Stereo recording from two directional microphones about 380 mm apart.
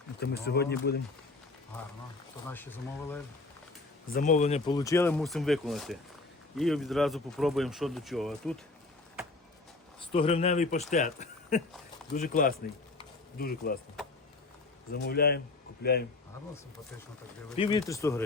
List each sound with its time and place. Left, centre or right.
0.2 s speech: left
4.1 s speech: left; by 8.5 s centre
10.1 s speech: centre
13.0 s a sound: left
15.0 s speech: left
17.6 s speech: centre